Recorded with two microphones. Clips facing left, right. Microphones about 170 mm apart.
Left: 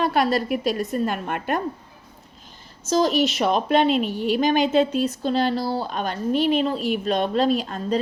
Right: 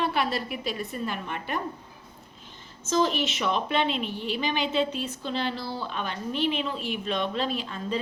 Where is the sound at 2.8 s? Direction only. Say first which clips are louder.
Left 5 dB; 40° left (ahead or behind).